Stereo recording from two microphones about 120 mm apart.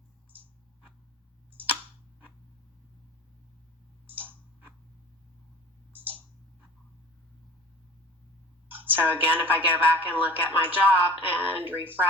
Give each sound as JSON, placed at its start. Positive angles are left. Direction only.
{"t": 0.3, "sound": "a sound", "side_deg": -15}
{"t": 4.1, "sound": "tick-tock", "side_deg": -15}
{"t": 5.9, "sound": "clicking", "side_deg": -15}
{"t": 8.7, "sound": "speech", "side_deg": -15}